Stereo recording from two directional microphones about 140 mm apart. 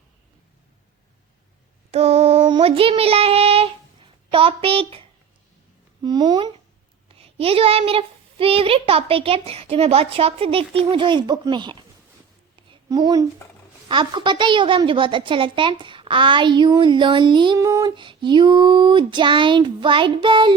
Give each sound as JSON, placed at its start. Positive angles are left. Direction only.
{"t": 1.9, "sound": "a sound", "side_deg": -50}
{"t": 6.0, "sound": "a woman's voice", "side_deg": -30}
{"t": 7.2, "sound": "a child's voice", "side_deg": -45}
{"t": 12.9, "sound": "a woman's voice", "side_deg": -25}